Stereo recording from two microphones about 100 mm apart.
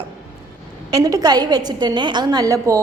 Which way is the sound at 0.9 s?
40° right (ahead or behind).